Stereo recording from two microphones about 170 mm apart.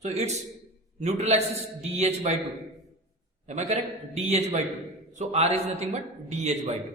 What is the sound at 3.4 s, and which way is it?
A man's voice, 40° right (ahead or behind).